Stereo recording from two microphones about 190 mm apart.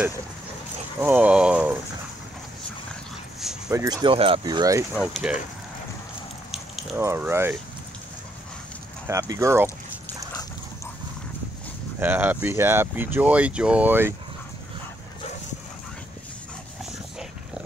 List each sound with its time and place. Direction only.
1.0 s speech: 10° right (ahead or behind)
3.3 s dog: centre (ahead or behind)
3.7 s speech: 20° right (ahead or behind)
4.9 s speech: 5° right (ahead or behind)
7.0 s speech: 15° right (ahead or behind)
9.0 s speech: 15° right (ahead or behind)
12.0 s speech: 10° right (ahead or behind)